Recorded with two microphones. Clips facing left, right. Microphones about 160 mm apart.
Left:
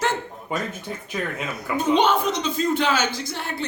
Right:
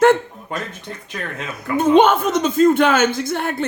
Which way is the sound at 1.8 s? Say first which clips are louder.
Right 6 dB; 50° right (ahead or behind).